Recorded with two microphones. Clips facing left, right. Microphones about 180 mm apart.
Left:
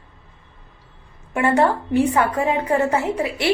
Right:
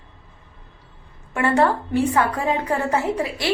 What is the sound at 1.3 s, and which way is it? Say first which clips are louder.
Speech: left 1 dB; 15° left (ahead or behind).